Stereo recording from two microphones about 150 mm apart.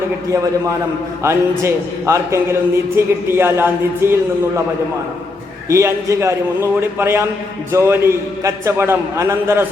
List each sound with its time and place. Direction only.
1.2 s a man's voice: 20° right (ahead or behind)
5.6 s a man's voice: 20° right (ahead or behind)